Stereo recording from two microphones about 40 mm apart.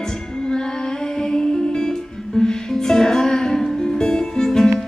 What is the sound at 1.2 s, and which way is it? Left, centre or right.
Music, centre.